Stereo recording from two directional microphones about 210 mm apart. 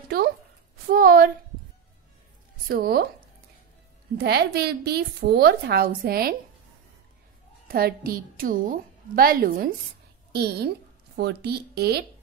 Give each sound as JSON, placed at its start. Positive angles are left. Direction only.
{"t": 0.1, "sound": "a woman's voice", "side_deg": -45}
{"t": 2.7, "sound": "a woman's voice", "side_deg": -45}
{"t": 4.2, "sound": "a woman's voice", "side_deg": -50}
{"t": 7.6, "sound": "a woman's voice", "side_deg": -45}